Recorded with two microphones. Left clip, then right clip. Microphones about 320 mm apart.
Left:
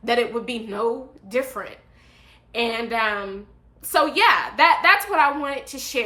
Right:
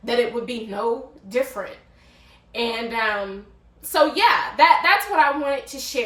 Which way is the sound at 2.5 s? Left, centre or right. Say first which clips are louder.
Left 1 dB; centre.